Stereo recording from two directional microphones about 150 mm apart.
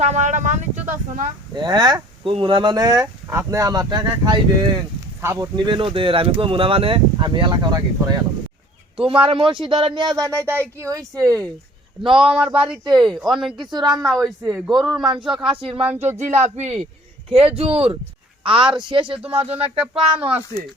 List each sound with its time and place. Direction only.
0.0 s speech: 50° right (ahead or behind)
1.5 s speech: 30° right (ahead or behind)
9.0 s speech: 35° right (ahead or behind)
12.2 s speech: 5° right (ahead or behind)
13.7 s speech: 30° right (ahead or behind)
13.9 s speech: centre (ahead or behind)
15.4 s speech: 35° right (ahead or behind)
15.8 s speech: 15° right (ahead or behind)
16.1 s speech: 50° right (ahead or behind)
19.5 s speech: 10° right (ahead or behind)